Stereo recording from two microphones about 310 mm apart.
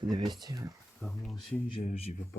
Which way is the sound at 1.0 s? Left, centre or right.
Centre.